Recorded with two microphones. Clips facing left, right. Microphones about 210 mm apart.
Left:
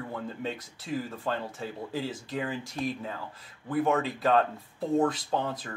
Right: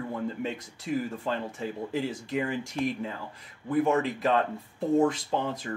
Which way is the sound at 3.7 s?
20° right (ahead or behind).